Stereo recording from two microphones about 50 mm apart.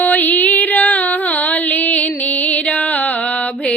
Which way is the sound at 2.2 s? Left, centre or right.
Left.